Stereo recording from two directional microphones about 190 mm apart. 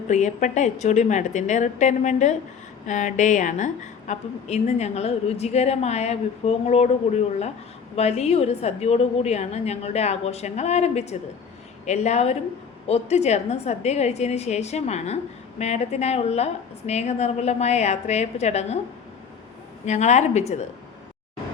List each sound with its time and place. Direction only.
0.1 s a woman's voice: 40° left (ahead or behind)
7.9 s a woman's voice: 35° left (ahead or behind)
19.8 s a woman's voice: 35° left (ahead or behind)